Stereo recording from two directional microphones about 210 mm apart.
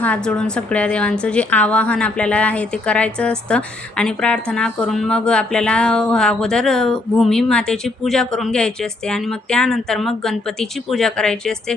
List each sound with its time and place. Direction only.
0.0 s a woman's voice: 5° left (ahead or behind)